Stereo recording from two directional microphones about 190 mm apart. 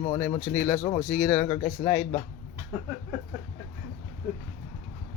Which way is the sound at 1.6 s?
25° left (ahead or behind).